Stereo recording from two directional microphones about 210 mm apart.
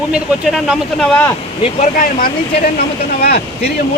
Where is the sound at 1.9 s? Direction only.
40° left (ahead or behind).